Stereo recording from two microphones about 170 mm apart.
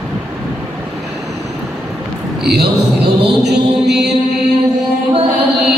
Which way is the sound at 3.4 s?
80° right.